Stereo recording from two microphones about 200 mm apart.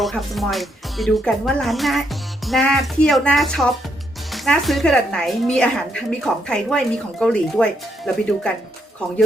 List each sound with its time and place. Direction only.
0.0 s a woman's voice: centre (ahead or behind)